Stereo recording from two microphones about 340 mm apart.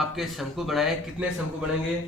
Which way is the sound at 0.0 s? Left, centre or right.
Centre.